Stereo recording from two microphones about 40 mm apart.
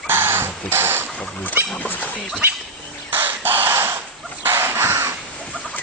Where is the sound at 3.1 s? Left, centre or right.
Right.